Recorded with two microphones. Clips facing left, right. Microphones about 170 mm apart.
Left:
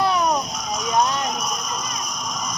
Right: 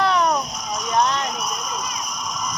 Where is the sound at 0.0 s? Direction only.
10° left (ahead or behind).